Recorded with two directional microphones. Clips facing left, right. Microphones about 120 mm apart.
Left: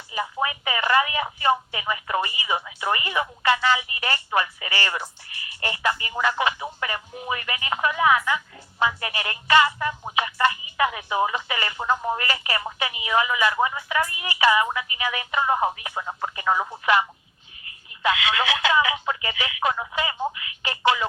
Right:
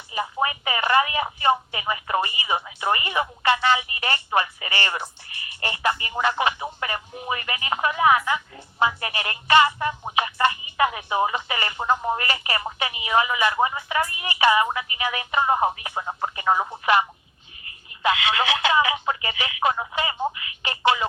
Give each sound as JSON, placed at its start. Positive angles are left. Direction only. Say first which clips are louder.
{"t": 0.1, "sound": "telephone", "louder": "right 1 dB", "side_deg": -20}
{"t": 1.2, "sound": "speech", "louder": "right 1 dB", "side_deg": -20}
{"t": 18.3, "sound": "telephone", "louder": "right 1 dB", "side_deg": -20}
{"t": 19.5, "sound": "speech", "louder": "right 2 dB", "side_deg": -30}
{"t": 20.7, "sound": "telephone", "louder": "even", "side_deg": -20}